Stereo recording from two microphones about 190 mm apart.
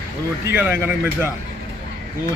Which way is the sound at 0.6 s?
10° right (ahead or behind).